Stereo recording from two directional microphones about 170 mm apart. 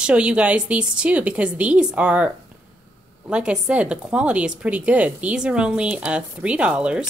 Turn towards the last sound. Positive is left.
turn(degrees=-5)  # may be behind; listen again after turning